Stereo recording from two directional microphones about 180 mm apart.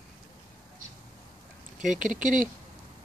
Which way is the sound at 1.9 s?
45° right (ahead or behind).